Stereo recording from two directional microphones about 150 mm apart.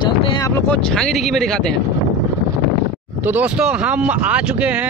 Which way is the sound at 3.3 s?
10° right (ahead or behind).